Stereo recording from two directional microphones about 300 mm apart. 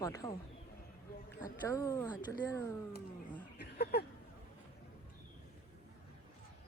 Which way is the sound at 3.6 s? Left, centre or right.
Left.